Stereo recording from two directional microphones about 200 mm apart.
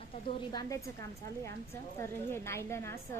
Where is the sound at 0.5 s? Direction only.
15° left (ahead or behind).